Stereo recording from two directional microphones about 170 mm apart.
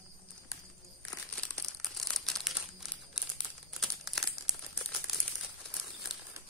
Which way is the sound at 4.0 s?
Centre (ahead or behind).